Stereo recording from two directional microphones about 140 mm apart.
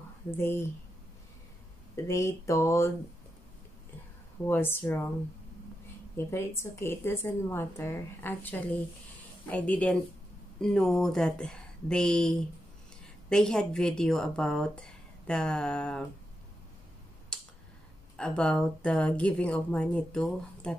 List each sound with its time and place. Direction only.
0.4 s a woman's voice: 15° left (ahead or behind)
2.0 s a sound: 20° left (ahead or behind)
4.5 s a woman's voice: 15° left (ahead or behind)
6.1 s a woman's voice: 20° left (ahead or behind)
17.3 s a sound: 5° left (ahead or behind)
18.1 s a woman's voice: 5° left (ahead or behind)